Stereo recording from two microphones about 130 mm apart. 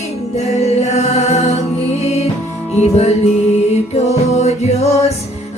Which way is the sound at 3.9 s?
60° left (ahead or behind).